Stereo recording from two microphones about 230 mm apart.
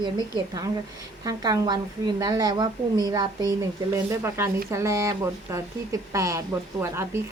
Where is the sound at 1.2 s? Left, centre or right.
Centre.